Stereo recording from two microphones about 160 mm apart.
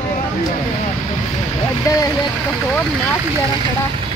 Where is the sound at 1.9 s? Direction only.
20° left (ahead or behind).